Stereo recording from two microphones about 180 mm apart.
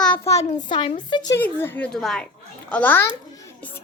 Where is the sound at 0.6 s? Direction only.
25° left (ahead or behind).